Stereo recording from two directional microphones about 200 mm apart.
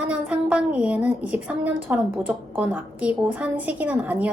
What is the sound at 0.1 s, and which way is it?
A woman's voice, 5° right (ahead or behind).